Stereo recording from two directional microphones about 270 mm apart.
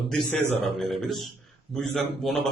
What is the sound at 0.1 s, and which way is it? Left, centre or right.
Speech, centre.